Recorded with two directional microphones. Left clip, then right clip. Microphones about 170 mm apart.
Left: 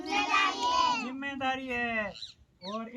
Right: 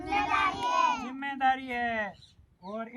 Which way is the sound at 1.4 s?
25° right (ahead or behind).